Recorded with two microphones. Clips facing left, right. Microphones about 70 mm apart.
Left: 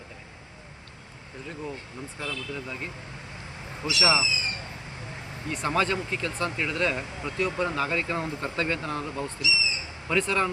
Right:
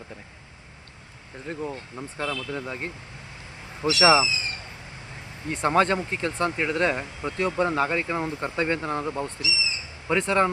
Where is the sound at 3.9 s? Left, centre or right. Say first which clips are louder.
Right 6 dB; right.